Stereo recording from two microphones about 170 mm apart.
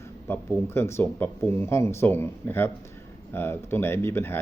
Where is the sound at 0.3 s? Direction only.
15° left (ahead or behind).